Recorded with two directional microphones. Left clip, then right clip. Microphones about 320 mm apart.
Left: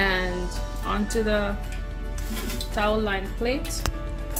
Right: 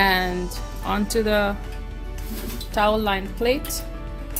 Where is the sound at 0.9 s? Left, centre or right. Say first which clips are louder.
Right 4 dB; right.